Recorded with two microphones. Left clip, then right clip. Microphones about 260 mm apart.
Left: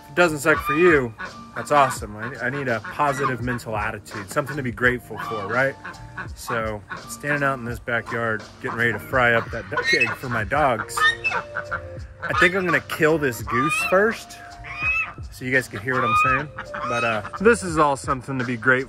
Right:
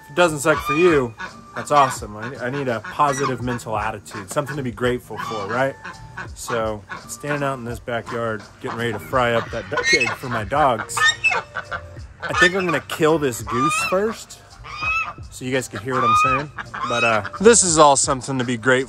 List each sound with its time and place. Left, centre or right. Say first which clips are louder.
0.1 s speech: right 1 dB; centre
9.7 s speech: right 2 dB; right
10.3 s speech: right 4 dB; centre
10.8 s chicken: right 2 dB; right
12.4 s speech: right 1 dB; centre
13.5 s speech: right 2 dB; right
13.9 s speech: left 3 dB; centre
15.0 s fowl: even; centre
16.0 s speech: right 3 dB; right
16.3 s chicken: right 2 dB; right
16.9 s speech: right 5 dB; right
17.4 s speech: right 5 dB; centre